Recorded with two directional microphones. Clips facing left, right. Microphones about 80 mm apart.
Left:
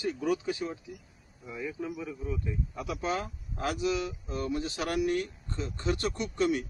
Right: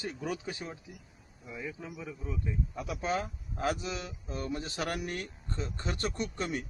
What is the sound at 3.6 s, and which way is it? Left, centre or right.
Speech, right.